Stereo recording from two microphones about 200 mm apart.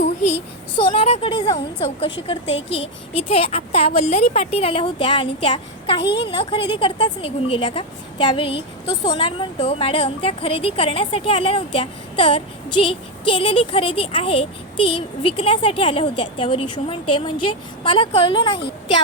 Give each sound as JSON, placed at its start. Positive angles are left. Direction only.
{"t": 0.9, "sound": "a woman's voice", "side_deg": 30}
{"t": 6.0, "sound": "a woman's voice", "side_deg": 60}
{"t": 6.3, "sound": "a woman's voice", "side_deg": 25}